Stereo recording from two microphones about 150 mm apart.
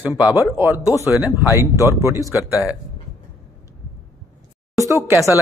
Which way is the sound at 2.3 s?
20° left (ahead or behind).